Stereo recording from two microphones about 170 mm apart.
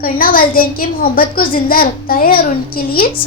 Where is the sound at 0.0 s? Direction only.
55° left (ahead or behind).